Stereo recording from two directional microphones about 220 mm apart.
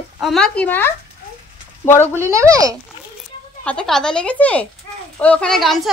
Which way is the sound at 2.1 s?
15° right (ahead or behind).